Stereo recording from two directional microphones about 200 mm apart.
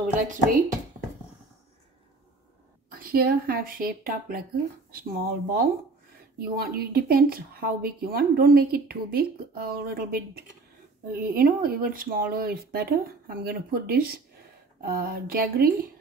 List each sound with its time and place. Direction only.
2.9 s speech: 45° right (ahead or behind)